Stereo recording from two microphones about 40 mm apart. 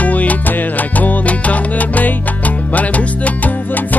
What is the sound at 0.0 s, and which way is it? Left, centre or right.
Music, left.